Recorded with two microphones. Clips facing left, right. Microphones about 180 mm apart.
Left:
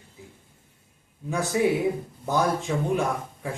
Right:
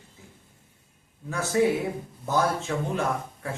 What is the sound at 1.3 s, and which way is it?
A man's voice, 15° left (ahead or behind).